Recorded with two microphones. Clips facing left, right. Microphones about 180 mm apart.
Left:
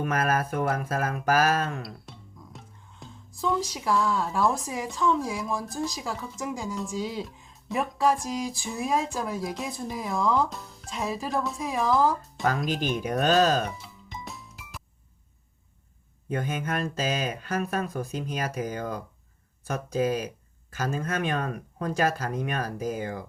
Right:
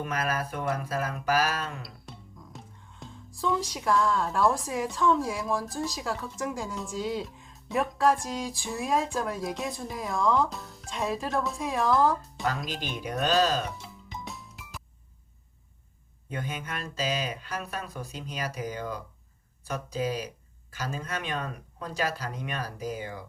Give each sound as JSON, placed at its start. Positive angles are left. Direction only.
{"t": 0.0, "sound": "speech", "side_deg": 50}
{"t": 1.8, "sound": "speech", "side_deg": 0}
{"t": 12.5, "sound": "speech", "side_deg": 50}
{"t": 13.7, "sound": "music", "side_deg": 0}
{"t": 16.3, "sound": "speech", "side_deg": 50}